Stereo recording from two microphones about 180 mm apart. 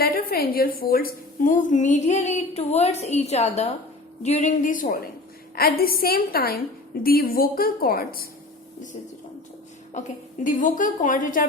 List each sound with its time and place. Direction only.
0.0 s a woman's voice: 55° left (ahead or behind)
9.9 s a woman's voice: 45° left (ahead or behind)